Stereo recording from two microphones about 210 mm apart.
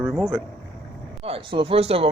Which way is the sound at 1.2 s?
25° right (ahead or behind).